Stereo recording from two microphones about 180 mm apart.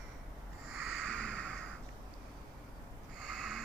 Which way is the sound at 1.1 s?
5° left (ahead or behind).